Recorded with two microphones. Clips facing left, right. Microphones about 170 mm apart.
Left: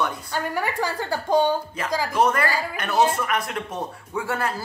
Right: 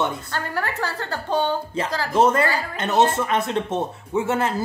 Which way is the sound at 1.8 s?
25° right (ahead or behind).